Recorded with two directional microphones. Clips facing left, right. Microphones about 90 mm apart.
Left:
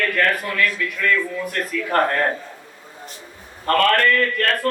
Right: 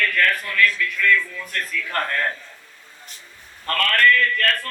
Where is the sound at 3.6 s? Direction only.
30° left (ahead or behind).